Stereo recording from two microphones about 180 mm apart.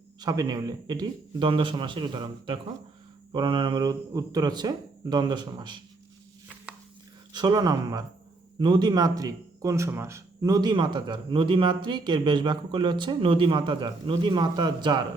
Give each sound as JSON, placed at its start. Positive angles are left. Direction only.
{"t": 0.2, "sound": "a man's voice", "side_deg": -20}
{"t": 7.3, "sound": "a man's voice", "side_deg": -20}